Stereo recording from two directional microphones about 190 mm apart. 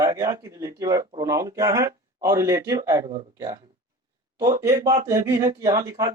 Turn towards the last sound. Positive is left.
turn(degrees=-20)  # may be behind; listen again after turning